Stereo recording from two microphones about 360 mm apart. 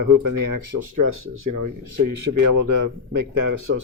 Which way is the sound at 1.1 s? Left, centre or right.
Right.